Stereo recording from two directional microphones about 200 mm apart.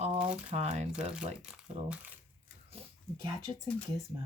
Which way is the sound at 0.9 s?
5° right (ahead or behind).